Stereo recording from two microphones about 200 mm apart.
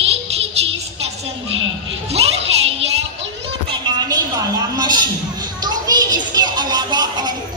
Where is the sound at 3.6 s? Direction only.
20° right (ahead or behind).